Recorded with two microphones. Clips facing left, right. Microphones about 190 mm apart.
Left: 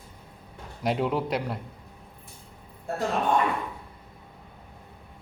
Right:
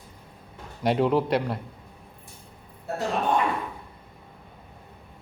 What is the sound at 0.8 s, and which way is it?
Speech, centre (ahead or behind).